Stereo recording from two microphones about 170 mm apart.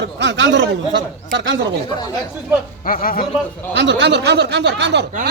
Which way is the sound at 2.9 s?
55° left (ahead or behind).